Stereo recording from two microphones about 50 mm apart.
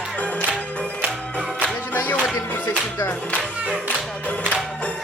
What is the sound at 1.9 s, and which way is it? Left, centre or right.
Music, left.